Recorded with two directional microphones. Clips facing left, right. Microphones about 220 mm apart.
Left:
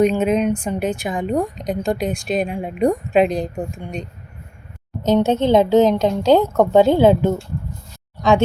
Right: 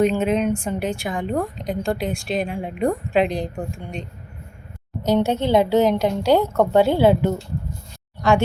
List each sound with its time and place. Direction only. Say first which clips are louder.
0.0 s a woman's voice: left 2 dB; 15° left (ahead or behind)
5.2 s a woman's voice: left 4 dB; 20° left (ahead or behind)